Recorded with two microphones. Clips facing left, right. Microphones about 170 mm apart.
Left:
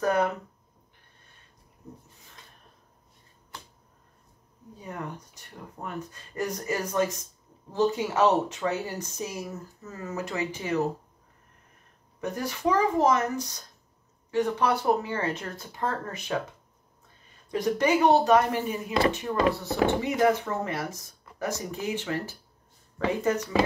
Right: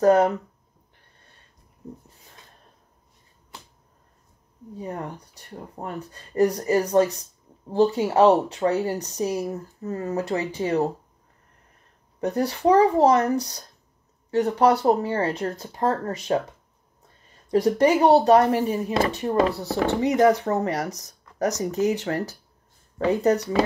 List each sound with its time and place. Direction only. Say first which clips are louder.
0.0 s speech: right 8 dB; 35° right (ahead or behind)
4.7 s speech: right 5 dB; 35° right (ahead or behind)
12.2 s speech: right 7 dB; 35° right (ahead or behind)
17.5 s speech: right 6 dB; 35° right (ahead or behind)